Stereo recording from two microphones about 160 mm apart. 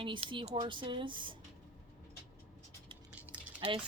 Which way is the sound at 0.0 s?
30° right (ahead or behind).